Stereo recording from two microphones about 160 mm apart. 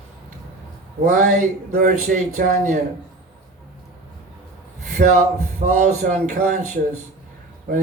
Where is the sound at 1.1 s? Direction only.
55° right (ahead or behind).